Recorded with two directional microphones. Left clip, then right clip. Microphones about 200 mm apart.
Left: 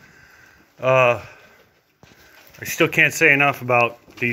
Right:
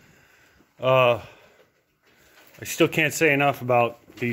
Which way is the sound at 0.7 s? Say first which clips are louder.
Left 3 dB; 20° right (ahead or behind).